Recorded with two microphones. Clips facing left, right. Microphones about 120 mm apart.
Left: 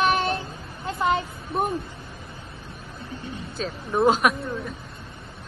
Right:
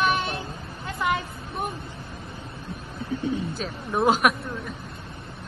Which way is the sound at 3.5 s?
5° right (ahead or behind).